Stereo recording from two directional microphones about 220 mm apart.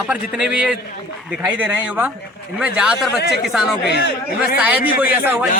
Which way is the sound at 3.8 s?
45° left (ahead or behind).